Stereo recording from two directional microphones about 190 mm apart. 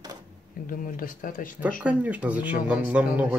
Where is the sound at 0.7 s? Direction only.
45° left (ahead or behind).